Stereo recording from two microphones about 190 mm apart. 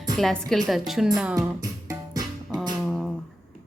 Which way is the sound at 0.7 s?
Centre (ahead or behind).